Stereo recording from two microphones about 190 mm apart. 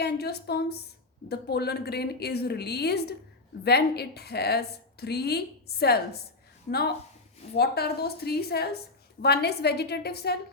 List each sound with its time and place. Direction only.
0.0 s a woman's voice: 60° left (ahead or behind)